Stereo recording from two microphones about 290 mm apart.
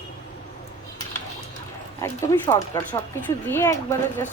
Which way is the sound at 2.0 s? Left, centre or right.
Centre.